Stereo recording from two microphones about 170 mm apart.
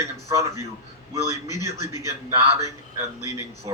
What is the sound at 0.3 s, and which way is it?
Speech, 20° right (ahead or behind).